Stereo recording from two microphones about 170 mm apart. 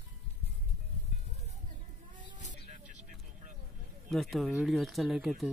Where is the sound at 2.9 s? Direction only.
45° right (ahead or behind).